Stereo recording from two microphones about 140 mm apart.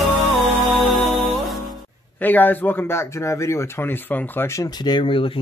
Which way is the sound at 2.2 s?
15° left (ahead or behind).